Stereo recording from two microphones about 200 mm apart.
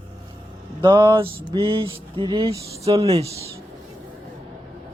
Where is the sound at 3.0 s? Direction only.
30° right (ahead or behind).